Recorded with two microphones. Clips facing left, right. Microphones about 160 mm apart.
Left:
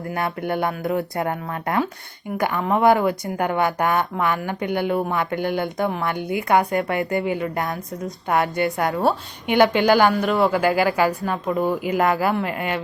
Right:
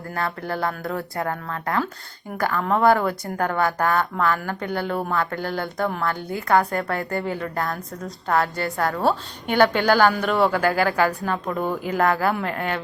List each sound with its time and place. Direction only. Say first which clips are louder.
0.1 s a woman's voice: left 2 dB; 20° left (ahead or behind)
10.2 s a woman's voice: left 1 dB; centre (ahead or behind)